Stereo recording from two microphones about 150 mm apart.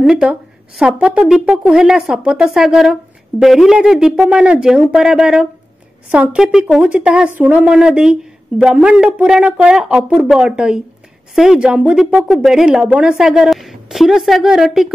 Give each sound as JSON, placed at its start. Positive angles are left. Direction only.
{"t": 0.0, "sound": "speech", "side_deg": -5}